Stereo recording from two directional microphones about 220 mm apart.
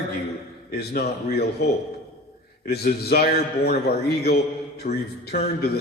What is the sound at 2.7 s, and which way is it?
Speech, 45° left (ahead or behind).